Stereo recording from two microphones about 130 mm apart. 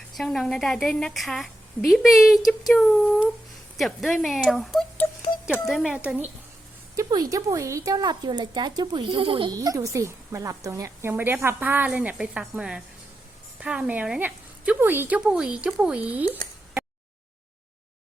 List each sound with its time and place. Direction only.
0.2 s a woman's voice: 5° left (ahead or behind)
6.0 s a woman's voice: 15° right (ahead or behind)
6.9 s a woman's voice: 25° right (ahead or behind); by 9.6 s 40° right (ahead or behind)
9.6 s a woman's voice: 25° right (ahead or behind)